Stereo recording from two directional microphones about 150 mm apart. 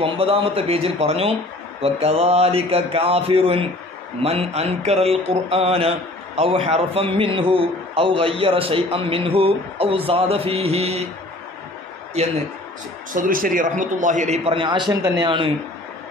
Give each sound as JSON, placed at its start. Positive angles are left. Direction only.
{"t": 0.0, "sound": "mantra", "side_deg": -40}
{"t": 12.2, "sound": "a man's voice", "side_deg": -45}
{"t": 13.1, "sound": "a man's voice", "side_deg": -65}
{"t": 14.4, "sound": "mantra", "side_deg": -35}